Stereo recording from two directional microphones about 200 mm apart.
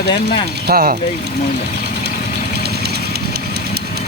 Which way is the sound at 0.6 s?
50° right (ahead or behind).